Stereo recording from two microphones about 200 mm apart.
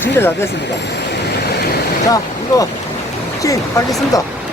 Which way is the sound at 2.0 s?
15° left (ahead or behind).